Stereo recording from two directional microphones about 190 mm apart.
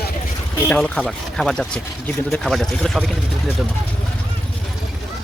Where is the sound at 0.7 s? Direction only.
5° left (ahead or behind).